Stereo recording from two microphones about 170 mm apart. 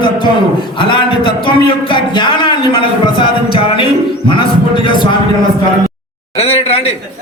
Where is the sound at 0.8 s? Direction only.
30° left (ahead or behind).